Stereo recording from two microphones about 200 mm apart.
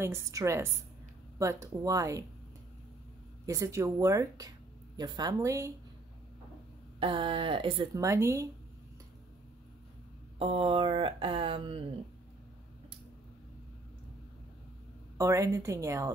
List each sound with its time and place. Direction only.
0.0 s speech: 15° right (ahead or behind)
3.4 s speech: 15° right (ahead or behind)
7.0 s speech: 25° right (ahead or behind)
10.4 s speech: 25° right (ahead or behind)
15.1 s speech: 15° right (ahead or behind)